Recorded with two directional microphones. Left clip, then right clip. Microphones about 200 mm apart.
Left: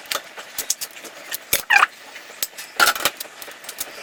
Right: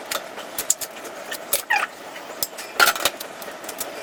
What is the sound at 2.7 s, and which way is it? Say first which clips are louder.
Keys jangling: even; centre (ahead or behind).